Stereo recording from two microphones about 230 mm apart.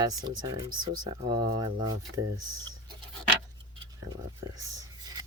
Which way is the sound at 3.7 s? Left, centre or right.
Centre.